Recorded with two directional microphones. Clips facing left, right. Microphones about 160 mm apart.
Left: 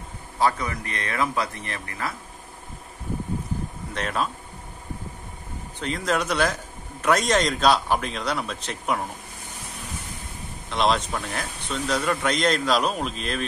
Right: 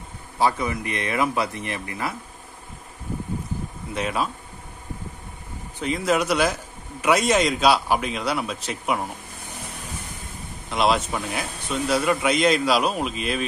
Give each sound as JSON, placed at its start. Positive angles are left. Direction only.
{"t": 0.4, "sound": "speech", "side_deg": -15}
{"t": 3.9, "sound": "speech", "side_deg": -10}
{"t": 5.8, "sound": "speech", "side_deg": -5}
{"t": 10.7, "sound": "speech", "side_deg": -5}